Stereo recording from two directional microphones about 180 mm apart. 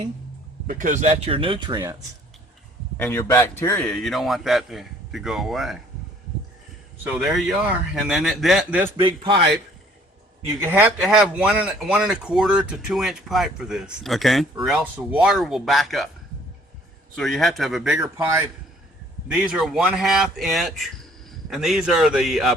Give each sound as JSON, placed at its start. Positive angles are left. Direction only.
{"t": 0.7, "sound": "speech", "side_deg": -45}
{"t": 3.0, "sound": "speech", "side_deg": 15}
{"t": 7.0, "sound": "speech", "side_deg": 0}
{"t": 9.0, "sound": "a man's voice", "side_deg": -30}
{"t": 10.6, "sound": "speech", "side_deg": -10}
{"t": 17.2, "sound": "speech", "side_deg": 0}
{"t": 18.2, "sound": "a man's voice", "side_deg": -15}
{"t": 19.3, "sound": "speech", "side_deg": -5}